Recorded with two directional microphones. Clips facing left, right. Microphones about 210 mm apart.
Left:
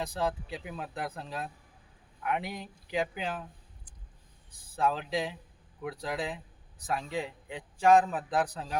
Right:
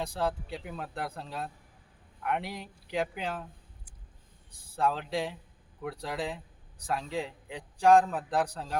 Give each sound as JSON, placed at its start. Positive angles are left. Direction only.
{"t": 0.0, "sound": "a man's voice", "side_deg": 0}
{"t": 4.7, "sound": "a man's voice", "side_deg": 0}